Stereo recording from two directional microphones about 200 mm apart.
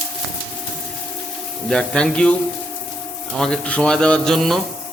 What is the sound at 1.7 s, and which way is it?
Speech, 5° left (ahead or behind).